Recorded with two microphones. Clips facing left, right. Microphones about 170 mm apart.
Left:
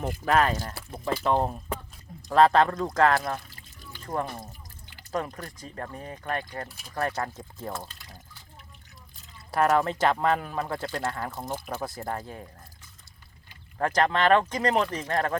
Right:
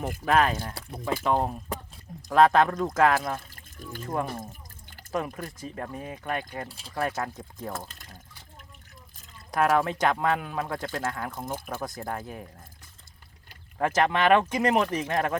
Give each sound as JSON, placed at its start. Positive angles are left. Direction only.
{"t": 0.0, "sound": "speech", "side_deg": -5}
{"t": 3.5, "sound": "water", "side_deg": -50}
{"t": 4.0, "sound": "speech", "side_deg": -5}
{"t": 6.7, "sound": "speech", "side_deg": -30}
{"t": 6.9, "sound": "speech", "side_deg": -5}
{"t": 9.6, "sound": "speech", "side_deg": -5}
{"t": 13.7, "sound": "speech", "side_deg": -5}